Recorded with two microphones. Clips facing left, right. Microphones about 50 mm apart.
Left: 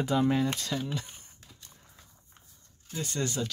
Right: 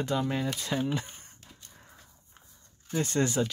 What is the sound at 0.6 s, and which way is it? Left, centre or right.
Speech, right.